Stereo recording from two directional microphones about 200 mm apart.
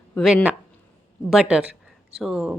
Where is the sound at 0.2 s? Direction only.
Centre (ahead or behind).